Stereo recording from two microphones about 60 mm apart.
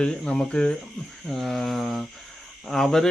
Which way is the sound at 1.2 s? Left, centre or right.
Centre.